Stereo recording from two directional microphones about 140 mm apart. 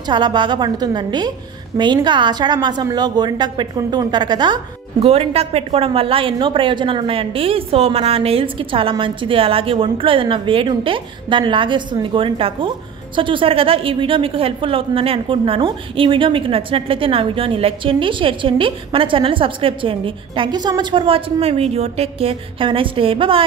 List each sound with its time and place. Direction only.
0.1 s a woman's voice: 35° right (ahead or behind)
5.0 s a woman's voice: 45° right (ahead or behind)